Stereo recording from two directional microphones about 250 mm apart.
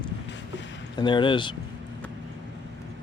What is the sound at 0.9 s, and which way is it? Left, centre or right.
Speech, centre.